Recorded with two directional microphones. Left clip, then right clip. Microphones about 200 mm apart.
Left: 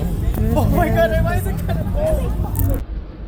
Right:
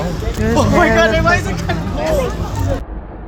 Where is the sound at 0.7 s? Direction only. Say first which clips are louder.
Right 5 dB; 90° left.